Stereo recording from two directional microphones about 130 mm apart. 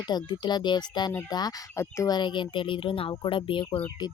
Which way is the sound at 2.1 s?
40° left (ahead or behind).